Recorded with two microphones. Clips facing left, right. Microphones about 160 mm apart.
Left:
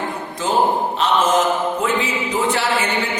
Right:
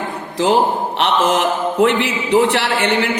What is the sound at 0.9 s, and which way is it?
A man's voice, 65° right (ahead or behind).